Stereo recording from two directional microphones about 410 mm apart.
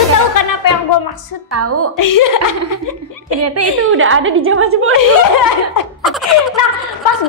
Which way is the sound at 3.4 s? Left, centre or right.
Right.